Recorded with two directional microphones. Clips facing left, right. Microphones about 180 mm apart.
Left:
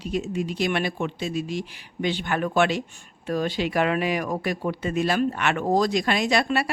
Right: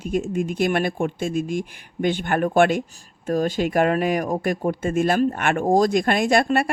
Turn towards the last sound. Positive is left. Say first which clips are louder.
# right 4 dB
turn(degrees=-50)  # may be behind; listen again after turning